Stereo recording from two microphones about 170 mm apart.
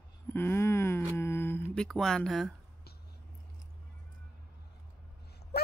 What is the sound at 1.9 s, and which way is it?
Speech, 5° left (ahead or behind).